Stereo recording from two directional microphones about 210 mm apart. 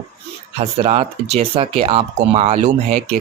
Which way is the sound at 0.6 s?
30° right (ahead or behind).